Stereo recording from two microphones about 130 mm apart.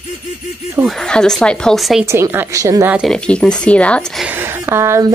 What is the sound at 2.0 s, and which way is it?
Speech, 20° right (ahead or behind).